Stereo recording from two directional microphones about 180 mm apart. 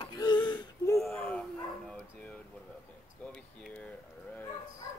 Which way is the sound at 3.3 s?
5° left (ahead or behind).